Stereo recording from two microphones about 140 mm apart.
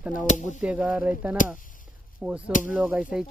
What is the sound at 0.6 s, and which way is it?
Speech, 10° right (ahead or behind).